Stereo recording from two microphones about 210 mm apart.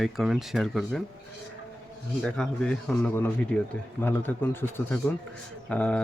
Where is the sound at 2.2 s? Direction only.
5° left (ahead or behind).